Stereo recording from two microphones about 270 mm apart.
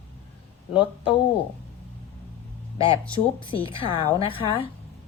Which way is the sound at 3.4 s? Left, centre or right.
Centre.